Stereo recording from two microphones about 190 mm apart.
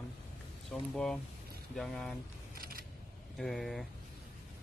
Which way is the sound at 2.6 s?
50° right (ahead or behind).